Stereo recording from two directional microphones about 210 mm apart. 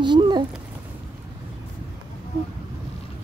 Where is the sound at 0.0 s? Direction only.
20° right (ahead or behind).